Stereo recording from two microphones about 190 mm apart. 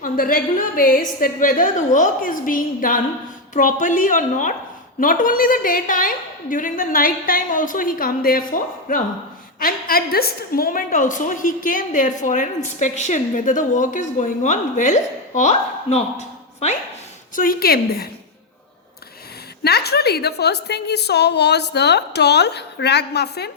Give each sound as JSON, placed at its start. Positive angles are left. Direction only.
{"t": 0.0, "sound": "a woman's voice", "side_deg": 50}
{"t": 17.3, "sound": "a woman's voice", "side_deg": 50}
{"t": 19.6, "sound": "a woman's voice", "side_deg": 60}